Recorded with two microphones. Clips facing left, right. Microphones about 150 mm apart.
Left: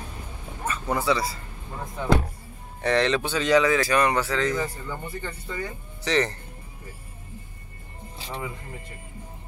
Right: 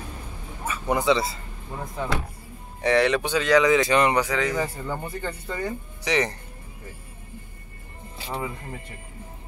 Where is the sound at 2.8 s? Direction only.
10° right (ahead or behind).